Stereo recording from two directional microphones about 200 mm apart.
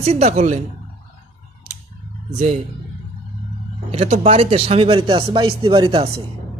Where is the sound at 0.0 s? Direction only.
35° right (ahead or behind).